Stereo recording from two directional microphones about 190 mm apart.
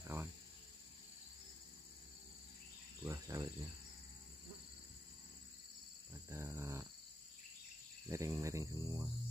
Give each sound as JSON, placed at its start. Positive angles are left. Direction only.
{"t": 0.0, "sound": "cricket", "side_deg": -15}
{"t": 3.0, "sound": "cricket", "side_deg": -15}
{"t": 6.3, "sound": "a sound", "side_deg": -15}
{"t": 8.1, "sound": "speech", "side_deg": -15}